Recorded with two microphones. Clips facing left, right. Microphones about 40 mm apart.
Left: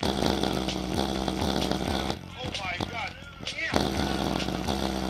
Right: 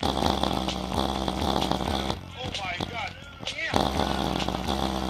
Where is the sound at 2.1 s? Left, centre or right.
Right.